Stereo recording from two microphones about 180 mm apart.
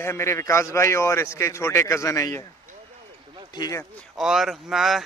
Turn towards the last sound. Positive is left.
turn(degrees=0)  # may be behind; listen again after turning